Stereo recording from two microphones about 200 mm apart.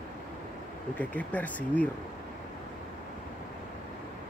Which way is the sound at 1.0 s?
5° left (ahead or behind).